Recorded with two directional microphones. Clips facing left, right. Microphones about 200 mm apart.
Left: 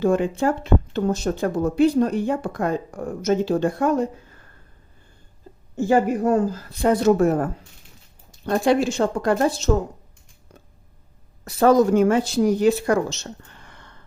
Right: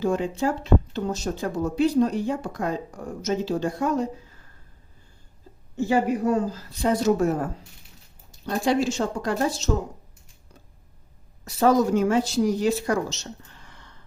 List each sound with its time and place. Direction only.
0.0 s speech: 55° left (ahead or behind)
5.7 s speech: 50° left (ahead or behind)
11.4 s speech: 55° left (ahead or behind)